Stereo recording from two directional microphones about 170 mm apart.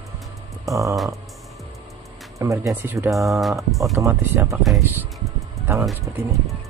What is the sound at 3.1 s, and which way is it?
Speech, centre (ahead or behind).